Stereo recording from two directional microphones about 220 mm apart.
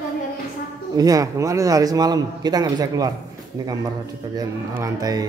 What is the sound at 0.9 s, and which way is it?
A man's voice, 15° right (ahead or behind).